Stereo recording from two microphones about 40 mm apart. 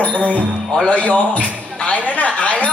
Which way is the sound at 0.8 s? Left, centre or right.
Left.